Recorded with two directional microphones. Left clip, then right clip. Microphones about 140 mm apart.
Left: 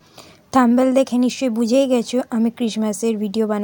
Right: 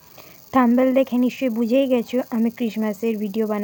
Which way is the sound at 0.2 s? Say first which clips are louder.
Left 2 dB; 20° left (ahead or behind).